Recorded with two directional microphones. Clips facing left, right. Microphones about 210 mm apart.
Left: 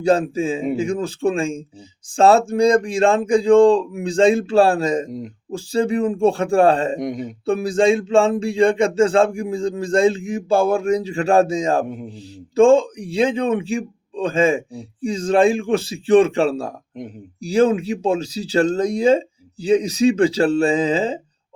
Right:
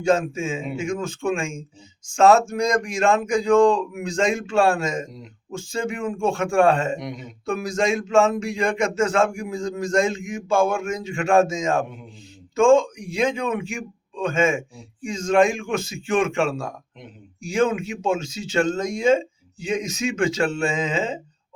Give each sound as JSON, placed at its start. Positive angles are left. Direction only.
{"t": 0.0, "sound": "a man's voice", "side_deg": 35}
{"t": 5.1, "sound": "speech", "side_deg": 45}
{"t": 5.5, "sound": "a man's voice", "side_deg": 35}
{"t": 7.0, "sound": "speech", "side_deg": 45}
{"t": 7.4, "sound": "a man's voice", "side_deg": 30}